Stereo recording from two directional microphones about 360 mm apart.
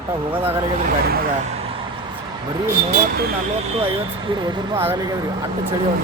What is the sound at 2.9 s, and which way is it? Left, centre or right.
Speech, right.